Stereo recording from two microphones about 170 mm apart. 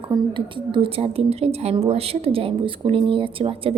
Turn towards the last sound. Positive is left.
turn(degrees=-30)  # may be behind; listen again after turning